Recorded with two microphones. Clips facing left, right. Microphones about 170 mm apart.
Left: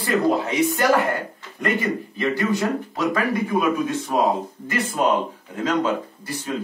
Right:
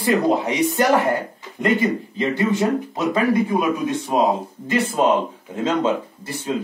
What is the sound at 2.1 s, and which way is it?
Speech, 25° right (ahead or behind).